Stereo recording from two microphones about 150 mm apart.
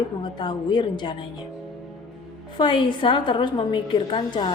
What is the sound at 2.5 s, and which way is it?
A woman's voice, 30° left (ahead or behind).